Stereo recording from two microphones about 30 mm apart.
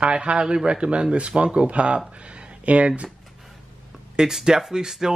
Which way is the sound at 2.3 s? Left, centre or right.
Right.